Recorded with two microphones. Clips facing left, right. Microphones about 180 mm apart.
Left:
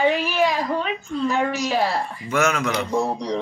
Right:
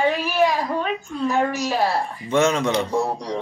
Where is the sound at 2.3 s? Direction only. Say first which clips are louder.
Right 3 dB; 30° right (ahead or behind).